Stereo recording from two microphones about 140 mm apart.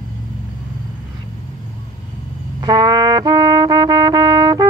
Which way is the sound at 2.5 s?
30° right (ahead or behind).